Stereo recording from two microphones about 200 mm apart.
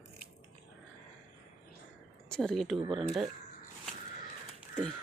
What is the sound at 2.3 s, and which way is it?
Speech, 5° left (ahead or behind).